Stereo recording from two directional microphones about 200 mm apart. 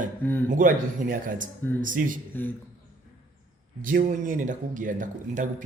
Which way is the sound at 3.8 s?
40° right (ahead or behind).